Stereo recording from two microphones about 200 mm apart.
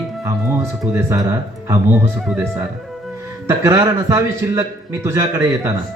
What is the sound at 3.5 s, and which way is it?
A man's voice, 15° right (ahead or behind).